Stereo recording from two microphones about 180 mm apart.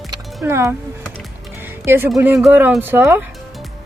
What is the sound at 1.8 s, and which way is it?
A woman's voice, 15° right (ahead or behind).